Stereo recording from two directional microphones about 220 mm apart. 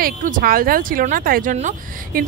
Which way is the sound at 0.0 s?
40° right (ahead or behind).